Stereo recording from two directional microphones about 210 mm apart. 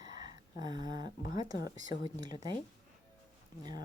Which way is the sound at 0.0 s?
20° right (ahead or behind).